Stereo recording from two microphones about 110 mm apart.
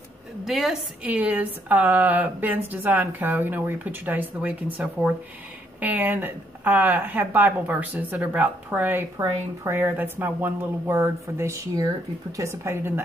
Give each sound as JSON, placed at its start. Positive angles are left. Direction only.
{"t": 0.5, "sound": "a woman's voice", "side_deg": 0}
{"t": 1.0, "sound": "a woman's voice", "side_deg": -10}